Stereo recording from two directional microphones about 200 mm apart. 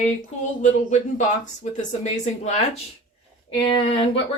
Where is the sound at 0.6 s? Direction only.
35° left (ahead or behind).